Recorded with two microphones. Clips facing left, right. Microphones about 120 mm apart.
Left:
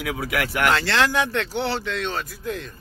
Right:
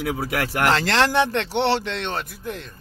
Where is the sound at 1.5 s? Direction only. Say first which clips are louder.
Right 4 dB; 85° right.